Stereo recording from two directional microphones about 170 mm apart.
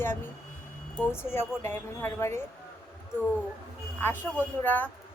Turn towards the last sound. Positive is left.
turn(degrees=10)  # may be behind; listen again after turning